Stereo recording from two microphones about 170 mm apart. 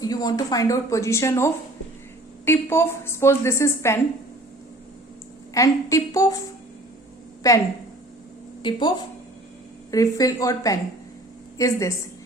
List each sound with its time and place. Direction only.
0.0 s a woman's voice: 20° left (ahead or behind)
5.5 s speech: 20° left (ahead or behind)
7.4 s speech: 20° left (ahead or behind)
8.6 s speech: 25° left (ahead or behind)
9.9 s speech: 20° left (ahead or behind)